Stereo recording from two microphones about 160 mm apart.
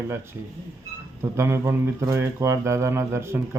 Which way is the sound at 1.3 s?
15° right (ahead or behind).